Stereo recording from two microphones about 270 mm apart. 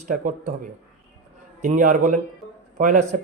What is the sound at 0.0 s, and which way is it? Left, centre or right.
A man's voice, right.